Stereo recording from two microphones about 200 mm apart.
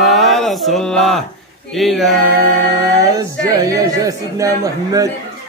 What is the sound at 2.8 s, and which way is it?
Speech, 15° right (ahead or behind).